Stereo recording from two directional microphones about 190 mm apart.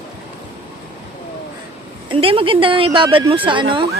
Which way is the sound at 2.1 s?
30° right (ahead or behind).